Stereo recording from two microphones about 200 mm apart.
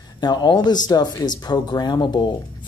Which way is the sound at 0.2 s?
20° left (ahead or behind).